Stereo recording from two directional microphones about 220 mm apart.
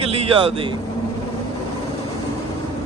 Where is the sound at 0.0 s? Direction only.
25° right (ahead or behind).